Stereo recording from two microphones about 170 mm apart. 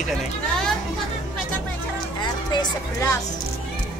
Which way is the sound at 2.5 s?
20° left (ahead or behind).